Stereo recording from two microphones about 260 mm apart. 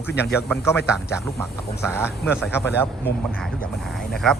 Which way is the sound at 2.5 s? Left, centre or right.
Centre.